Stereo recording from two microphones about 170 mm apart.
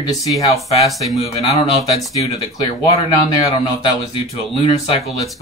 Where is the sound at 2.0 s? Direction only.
20° left (ahead or behind).